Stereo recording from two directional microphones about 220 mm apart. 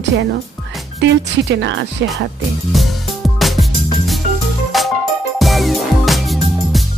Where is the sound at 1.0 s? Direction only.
55° right (ahead or behind).